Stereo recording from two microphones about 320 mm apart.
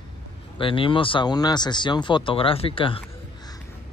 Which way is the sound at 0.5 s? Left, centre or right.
Centre.